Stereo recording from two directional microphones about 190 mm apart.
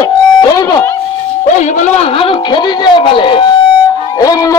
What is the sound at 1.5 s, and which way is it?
A man's voice, 40° left (ahead or behind).